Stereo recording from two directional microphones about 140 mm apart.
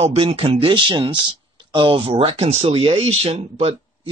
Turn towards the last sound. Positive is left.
turn(degrees=-45)  # may be behind; listen again after turning